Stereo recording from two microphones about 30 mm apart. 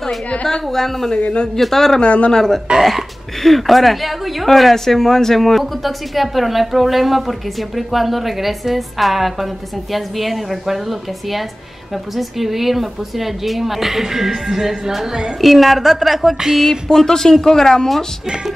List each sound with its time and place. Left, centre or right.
0.7 s speech: centre
2.0 s speech: left
2.3 s speech: centre
3.4 s a woman's voice: centre
16.9 s speech: centre